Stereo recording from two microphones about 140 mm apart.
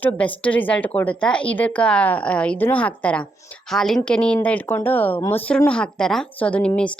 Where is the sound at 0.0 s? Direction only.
10° left (ahead or behind).